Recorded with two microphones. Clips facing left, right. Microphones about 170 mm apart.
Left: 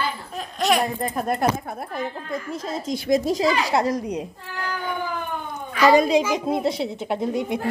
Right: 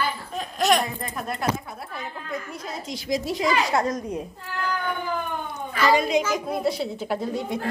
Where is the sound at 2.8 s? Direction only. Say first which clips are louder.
Left 6 dB; 55° left (ahead or behind).